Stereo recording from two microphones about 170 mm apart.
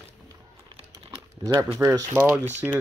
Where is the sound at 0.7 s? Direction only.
25° right (ahead or behind).